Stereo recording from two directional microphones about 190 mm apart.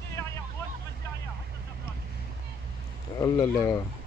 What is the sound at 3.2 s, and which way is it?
Speech, 20° left (ahead or behind).